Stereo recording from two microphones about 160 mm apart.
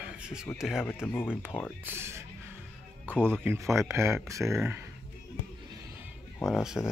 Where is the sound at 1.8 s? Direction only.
15° right (ahead or behind).